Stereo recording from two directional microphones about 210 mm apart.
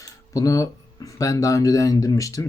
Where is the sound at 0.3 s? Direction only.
15° left (ahead or behind).